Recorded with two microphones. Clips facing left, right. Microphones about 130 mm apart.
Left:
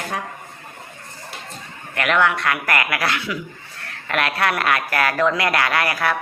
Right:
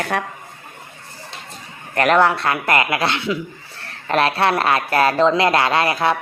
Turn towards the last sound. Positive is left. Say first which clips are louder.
# right 3 dB
turn(degrees=-25)  # may be behind; listen again after turning